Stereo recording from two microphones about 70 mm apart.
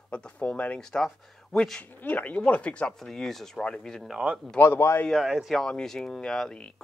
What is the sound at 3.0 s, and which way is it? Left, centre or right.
Speech, centre.